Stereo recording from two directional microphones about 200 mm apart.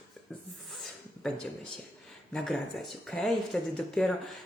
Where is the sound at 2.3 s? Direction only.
Centre (ahead or behind).